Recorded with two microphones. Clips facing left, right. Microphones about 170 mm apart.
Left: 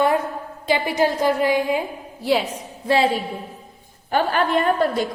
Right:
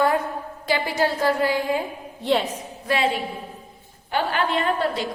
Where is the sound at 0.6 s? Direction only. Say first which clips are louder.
Left 3 dB; 20° left (ahead or behind).